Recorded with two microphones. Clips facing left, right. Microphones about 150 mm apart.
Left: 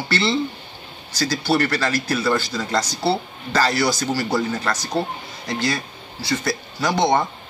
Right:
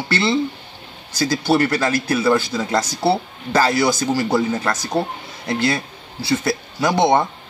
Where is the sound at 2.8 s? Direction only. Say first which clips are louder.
Right 3 dB; 50° right (ahead or behind).